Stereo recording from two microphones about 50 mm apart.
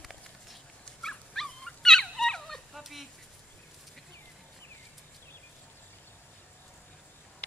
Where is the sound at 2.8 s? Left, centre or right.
Centre.